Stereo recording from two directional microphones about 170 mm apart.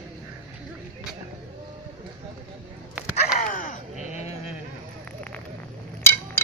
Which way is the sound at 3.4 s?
50° left (ahead or behind).